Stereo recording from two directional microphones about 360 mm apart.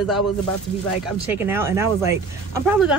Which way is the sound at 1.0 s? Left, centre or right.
Centre.